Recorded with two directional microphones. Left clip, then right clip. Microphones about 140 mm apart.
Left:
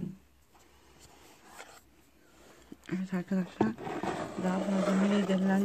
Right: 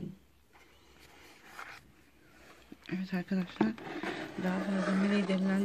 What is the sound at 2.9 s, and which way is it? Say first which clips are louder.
Speech: left 1 dB; 10° left (ahead or behind).